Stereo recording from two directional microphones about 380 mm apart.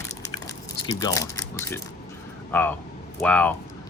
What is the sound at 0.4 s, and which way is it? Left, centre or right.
Speech, centre.